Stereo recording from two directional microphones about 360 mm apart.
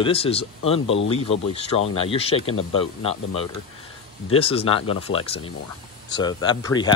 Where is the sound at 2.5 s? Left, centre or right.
Left.